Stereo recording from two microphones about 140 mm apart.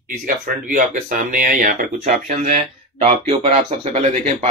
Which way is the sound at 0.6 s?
70° right (ahead or behind).